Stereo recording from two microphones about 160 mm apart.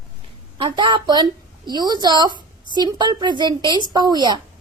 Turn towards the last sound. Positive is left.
turn(degrees=-25)  # may be behind; listen again after turning